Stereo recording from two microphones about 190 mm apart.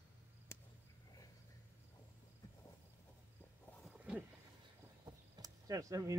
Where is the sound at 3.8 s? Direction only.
5° right (ahead or behind).